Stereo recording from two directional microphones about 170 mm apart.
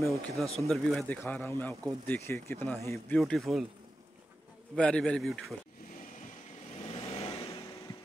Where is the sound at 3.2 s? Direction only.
Centre (ahead or behind).